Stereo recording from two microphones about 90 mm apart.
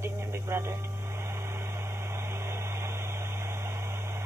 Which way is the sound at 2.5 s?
30° right (ahead or behind).